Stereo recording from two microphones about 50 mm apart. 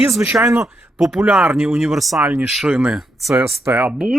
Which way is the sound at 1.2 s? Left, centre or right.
Right.